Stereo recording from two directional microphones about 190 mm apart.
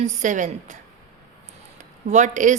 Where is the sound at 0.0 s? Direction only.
40° right (ahead or behind).